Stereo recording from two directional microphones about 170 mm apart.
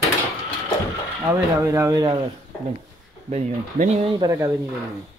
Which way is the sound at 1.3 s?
15° right (ahead or behind).